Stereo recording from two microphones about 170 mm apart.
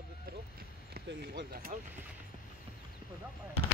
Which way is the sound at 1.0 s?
65° right (ahead or behind).